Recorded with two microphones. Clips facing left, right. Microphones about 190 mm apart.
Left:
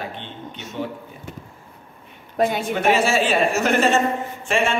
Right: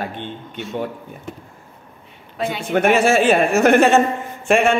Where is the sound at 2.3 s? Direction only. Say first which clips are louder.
Left 4 dB; 45° left (ahead or behind).